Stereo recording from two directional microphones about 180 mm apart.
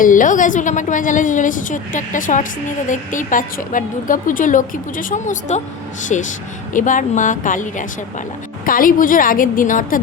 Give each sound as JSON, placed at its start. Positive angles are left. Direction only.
{"t": 0.0, "sound": "a woman's voice", "side_deg": 45}